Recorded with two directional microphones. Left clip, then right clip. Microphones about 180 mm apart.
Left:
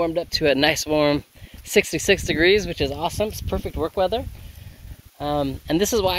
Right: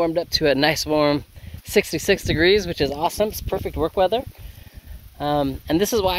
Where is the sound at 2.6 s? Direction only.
25° right (ahead or behind).